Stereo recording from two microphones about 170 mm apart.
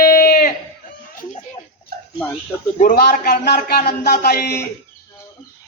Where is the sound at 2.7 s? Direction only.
50° left (ahead or behind).